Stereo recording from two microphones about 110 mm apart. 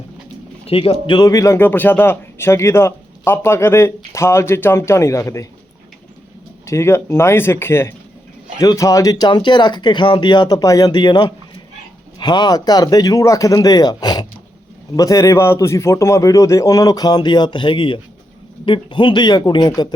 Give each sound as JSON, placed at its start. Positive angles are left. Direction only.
{"t": 0.6, "sound": "speech", "side_deg": 60}
{"t": 1.1, "sound": "a man's voice", "side_deg": 35}
{"t": 1.5, "sound": "speech", "side_deg": 15}
{"t": 6.7, "sound": "a man's voice", "side_deg": 25}